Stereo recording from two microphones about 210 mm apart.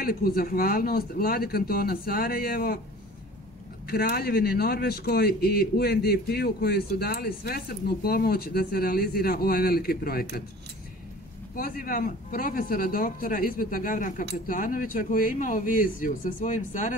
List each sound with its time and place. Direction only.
0.0 s a man's voice: 45° left (ahead or behind)
3.9 s a man's voice: 45° left (ahead or behind)
11.5 s a man's voice: 45° left (ahead or behind)